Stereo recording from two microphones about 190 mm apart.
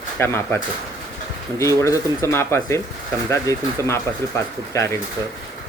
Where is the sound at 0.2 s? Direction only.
10° left (ahead or behind).